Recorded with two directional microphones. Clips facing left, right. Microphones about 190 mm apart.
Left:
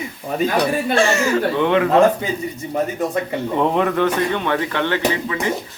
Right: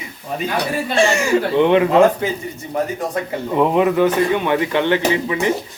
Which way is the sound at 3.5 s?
5° right (ahead or behind).